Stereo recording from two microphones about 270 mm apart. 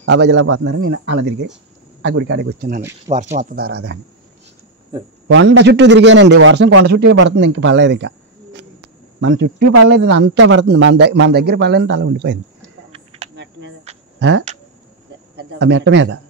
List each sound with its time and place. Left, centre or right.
0.0 s a man's voice: right
3.1 s a man's voice: right
5.3 s a man's voice: right
9.2 s a man's voice: right
12.6 s a sound: right
13.4 s cricket: right
15.3 s a man's voice: right